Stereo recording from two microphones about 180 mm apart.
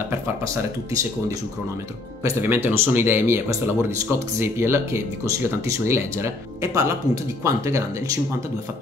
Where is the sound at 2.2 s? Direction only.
10° right (ahead or behind).